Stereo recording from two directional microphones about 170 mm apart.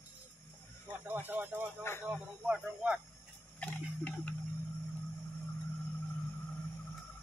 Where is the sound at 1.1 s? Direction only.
10° right (ahead or behind).